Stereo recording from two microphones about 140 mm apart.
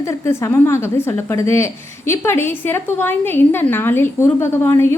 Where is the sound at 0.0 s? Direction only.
20° left (ahead or behind).